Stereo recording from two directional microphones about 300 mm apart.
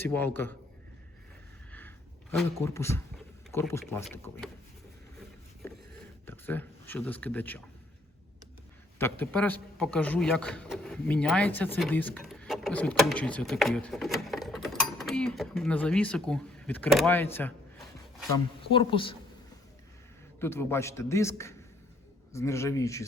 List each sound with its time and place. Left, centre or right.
0.0 s a man's voice: centre
2.3 s a man's voice: centre
5.6 s a sound: centre
6.2 s speech: centre
9.0 s a man's voice: centre
18.7 s a man's voice: centre
20.4 s a man's voice: centre